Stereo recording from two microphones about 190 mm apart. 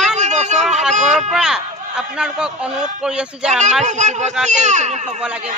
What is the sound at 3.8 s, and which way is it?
Speech, 40° right (ahead or behind).